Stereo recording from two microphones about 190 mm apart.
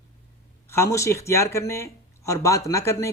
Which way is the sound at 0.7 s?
15° left (ahead or behind).